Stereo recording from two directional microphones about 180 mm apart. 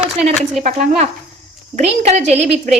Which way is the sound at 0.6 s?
40° right (ahead or behind).